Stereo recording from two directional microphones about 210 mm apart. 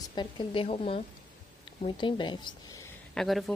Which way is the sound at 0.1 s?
20° left (ahead or behind).